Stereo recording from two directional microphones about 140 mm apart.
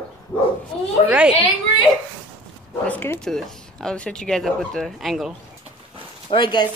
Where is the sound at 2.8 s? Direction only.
15° left (ahead or behind).